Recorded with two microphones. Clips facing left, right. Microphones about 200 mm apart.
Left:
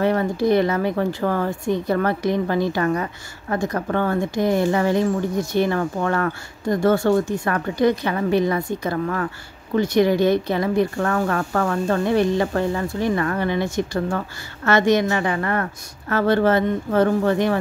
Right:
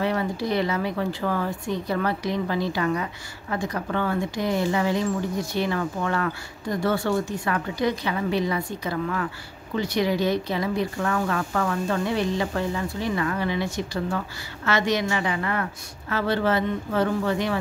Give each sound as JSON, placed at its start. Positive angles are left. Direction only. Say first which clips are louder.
{"t": 0.0, "sound": "speech", "louder": "left 6 dB", "side_deg": 50}